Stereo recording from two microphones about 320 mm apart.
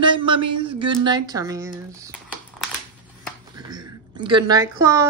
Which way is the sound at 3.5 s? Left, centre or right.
Centre.